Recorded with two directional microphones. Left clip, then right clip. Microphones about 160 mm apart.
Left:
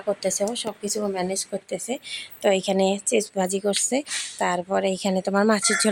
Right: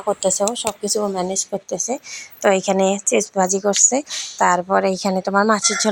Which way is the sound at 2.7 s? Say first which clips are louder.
Right 4 dB; 5° left (ahead or behind).